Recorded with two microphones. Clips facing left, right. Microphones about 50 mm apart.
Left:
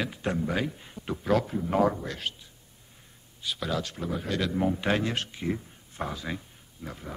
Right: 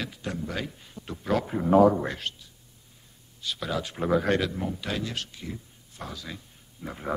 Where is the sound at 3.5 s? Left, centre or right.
Centre.